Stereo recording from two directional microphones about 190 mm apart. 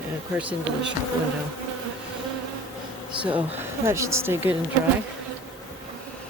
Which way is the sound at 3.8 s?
15° right (ahead or behind).